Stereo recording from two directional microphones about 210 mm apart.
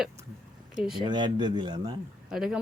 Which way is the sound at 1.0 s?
20° right (ahead or behind).